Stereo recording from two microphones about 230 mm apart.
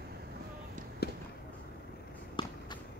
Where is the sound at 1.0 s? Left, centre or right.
Left.